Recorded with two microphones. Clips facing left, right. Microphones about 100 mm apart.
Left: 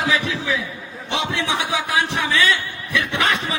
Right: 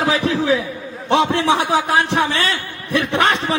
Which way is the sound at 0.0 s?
35° right (ahead or behind).